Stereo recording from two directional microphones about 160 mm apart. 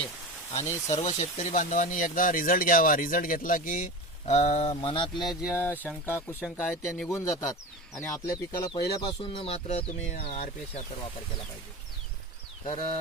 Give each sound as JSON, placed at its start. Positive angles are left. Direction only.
{"t": 0.5, "sound": "speech", "side_deg": 45}
{"t": 4.7, "sound": "speech", "side_deg": 30}
{"t": 5.2, "sound": "speech", "side_deg": -5}
{"t": 5.5, "sound": "speech", "side_deg": 15}
{"t": 7.1, "sound": "a man's voice", "side_deg": 20}
{"t": 8.7, "sound": "speech", "side_deg": 30}